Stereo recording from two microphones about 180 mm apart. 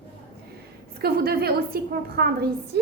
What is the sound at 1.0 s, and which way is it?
A woman's voice, 55° right (ahead or behind).